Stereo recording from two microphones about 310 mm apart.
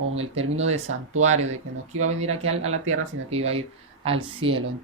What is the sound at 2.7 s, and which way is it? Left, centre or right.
Speech, right.